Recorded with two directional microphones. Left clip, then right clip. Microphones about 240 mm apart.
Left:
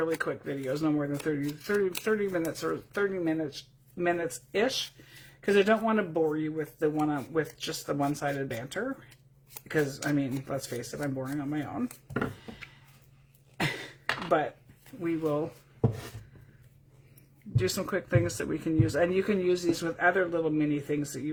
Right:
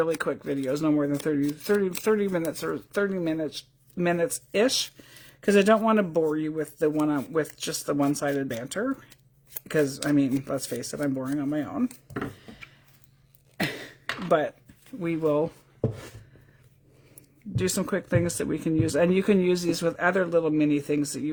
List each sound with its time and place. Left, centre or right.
0.0 s speech: right
13.8 s a sound: right
15.0 s speech: right
17.6 s speech: right